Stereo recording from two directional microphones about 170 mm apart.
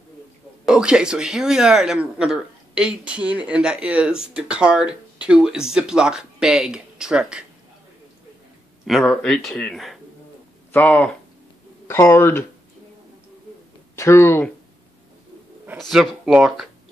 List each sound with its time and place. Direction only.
0.7 s speech: 5° right (ahead or behind)
8.8 s speech: centre (ahead or behind)
13.9 s speech: 15° left (ahead or behind)
15.8 s speech: centre (ahead or behind)